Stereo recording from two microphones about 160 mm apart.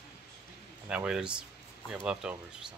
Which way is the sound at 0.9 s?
5° right (ahead or behind).